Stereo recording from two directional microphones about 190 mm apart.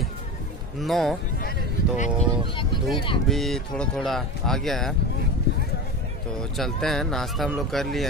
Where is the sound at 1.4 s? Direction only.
45° left (ahead or behind).